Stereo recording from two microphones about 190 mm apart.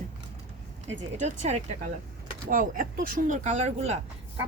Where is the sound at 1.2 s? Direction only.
40° right (ahead or behind).